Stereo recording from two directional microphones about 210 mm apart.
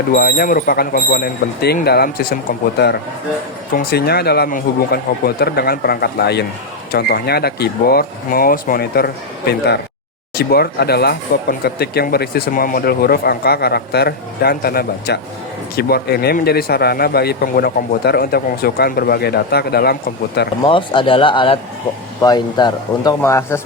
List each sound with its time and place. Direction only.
0.1 s speech: 45° left (ahead or behind)
10.3 s speech: 50° left (ahead or behind)
20.6 s speech: 25° left (ahead or behind)